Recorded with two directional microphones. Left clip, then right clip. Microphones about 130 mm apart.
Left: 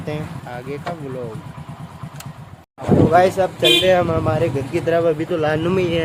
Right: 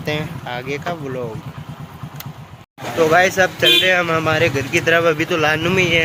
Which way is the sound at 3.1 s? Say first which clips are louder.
Right 1 dB; 15° left (ahead or behind).